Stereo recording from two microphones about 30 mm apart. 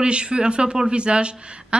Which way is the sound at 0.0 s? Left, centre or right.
Right.